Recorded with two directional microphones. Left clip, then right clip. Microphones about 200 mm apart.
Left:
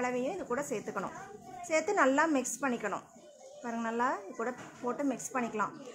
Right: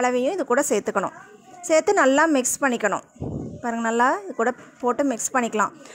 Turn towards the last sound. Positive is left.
turn(degrees=-45)  # may be behind; listen again after turning